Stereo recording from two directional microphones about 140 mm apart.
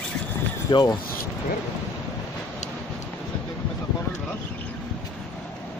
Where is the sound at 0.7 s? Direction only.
30° left (ahead or behind).